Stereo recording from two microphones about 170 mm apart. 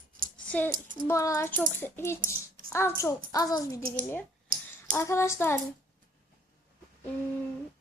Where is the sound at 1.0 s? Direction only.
20° left (ahead or behind).